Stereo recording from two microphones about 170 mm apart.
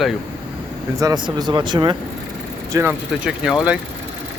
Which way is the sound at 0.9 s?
20° right (ahead or behind).